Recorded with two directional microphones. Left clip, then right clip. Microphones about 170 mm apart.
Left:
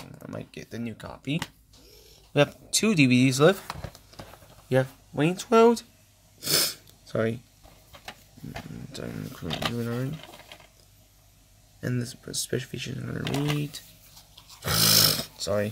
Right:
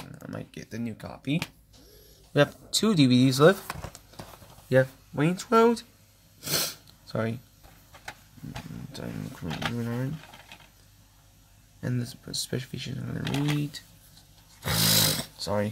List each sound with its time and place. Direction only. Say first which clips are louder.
0.1 s speech: left 1 dB; 5° left (ahead or behind)
6.4 s a sound: left 4 dB; 10° left (ahead or behind)
8.9 s speech: left 2 dB; 5° left (ahead or behind)
11.8 s speech: left 2 dB; 10° left (ahead or behind)
14.6 s roar: left 3 dB; 10° left (ahead or behind)